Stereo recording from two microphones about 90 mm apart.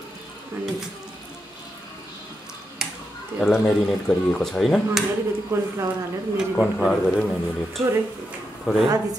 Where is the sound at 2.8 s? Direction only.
5° right (ahead or behind).